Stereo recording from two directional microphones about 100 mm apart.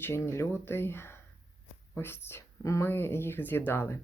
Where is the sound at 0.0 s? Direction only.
25° left (ahead or behind).